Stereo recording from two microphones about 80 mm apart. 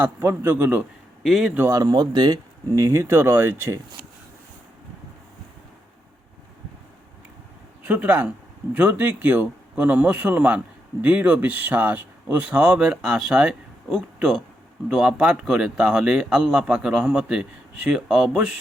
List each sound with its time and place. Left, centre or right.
0.2 s speech: right
1.2 s a man's voice: centre
1.7 s speech: right
2.7 s speech: right
7.9 s speech: right